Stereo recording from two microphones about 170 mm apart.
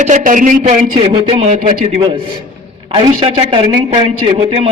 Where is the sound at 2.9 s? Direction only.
30° right (ahead or behind).